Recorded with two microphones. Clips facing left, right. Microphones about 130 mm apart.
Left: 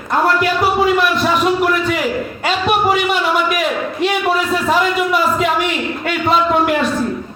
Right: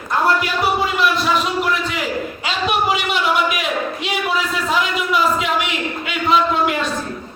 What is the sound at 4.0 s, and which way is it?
A man's voice, 45° left (ahead or behind).